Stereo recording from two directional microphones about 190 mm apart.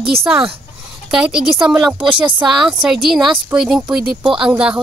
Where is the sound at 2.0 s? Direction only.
25° right (ahead or behind).